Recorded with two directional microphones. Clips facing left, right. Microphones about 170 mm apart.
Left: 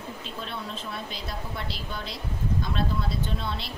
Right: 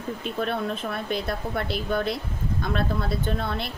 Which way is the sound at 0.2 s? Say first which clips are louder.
Right 12 dB; 60° right (ahead or behind).